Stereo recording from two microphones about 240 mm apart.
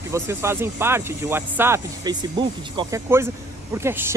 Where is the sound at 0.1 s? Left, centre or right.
Centre.